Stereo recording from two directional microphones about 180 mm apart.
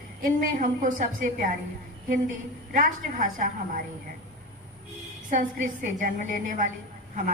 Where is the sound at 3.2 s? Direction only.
50° right (ahead or behind).